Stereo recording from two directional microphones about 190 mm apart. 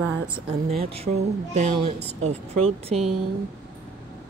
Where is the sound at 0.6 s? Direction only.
30° right (ahead or behind).